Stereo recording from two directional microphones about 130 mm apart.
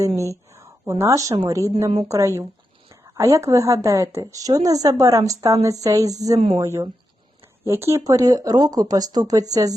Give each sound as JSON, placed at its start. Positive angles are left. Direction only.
{"t": 0.2, "sound": "a woman's voice", "side_deg": -25}